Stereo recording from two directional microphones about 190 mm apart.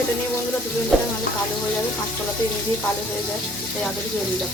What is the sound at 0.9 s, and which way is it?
Speech, centre (ahead or behind).